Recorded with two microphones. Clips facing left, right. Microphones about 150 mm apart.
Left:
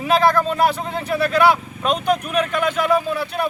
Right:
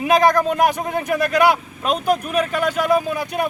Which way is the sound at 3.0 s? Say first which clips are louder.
Left 1 dB; 45° right (ahead or behind).